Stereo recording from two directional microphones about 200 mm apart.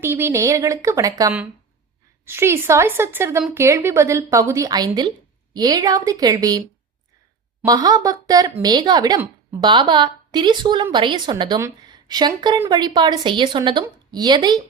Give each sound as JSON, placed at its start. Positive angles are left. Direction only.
{"t": 0.0, "sound": "a woman's voice", "side_deg": -10}